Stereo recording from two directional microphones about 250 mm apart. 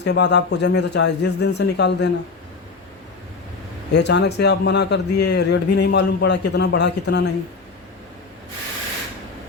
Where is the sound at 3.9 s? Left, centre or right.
Left.